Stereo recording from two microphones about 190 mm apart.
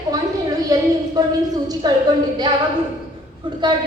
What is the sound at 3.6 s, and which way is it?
Speech, 25° right (ahead or behind).